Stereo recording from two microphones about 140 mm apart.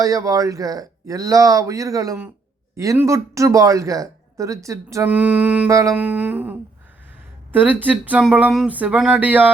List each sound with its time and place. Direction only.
0.0 s speech: 25° right (ahead or behind)
5.1 s speech: 10° right (ahead or behind)
5.6 s speech: 25° right (ahead or behind)
5.9 s speech: 10° right (ahead or behind)